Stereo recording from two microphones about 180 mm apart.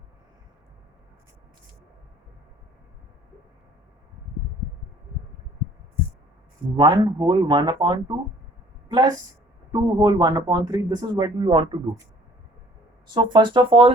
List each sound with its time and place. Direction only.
6.7 s speech: 25° right (ahead or behind)
13.1 s speech: 25° right (ahead or behind)